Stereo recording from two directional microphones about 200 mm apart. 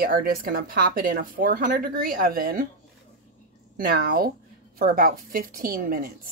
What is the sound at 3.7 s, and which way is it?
Speech, 45° right (ahead or behind).